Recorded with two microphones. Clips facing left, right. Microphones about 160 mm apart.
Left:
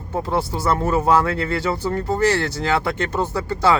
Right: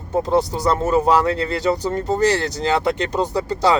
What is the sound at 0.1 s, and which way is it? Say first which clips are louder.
Speech: right 4 dB; 20° right (ahead or behind).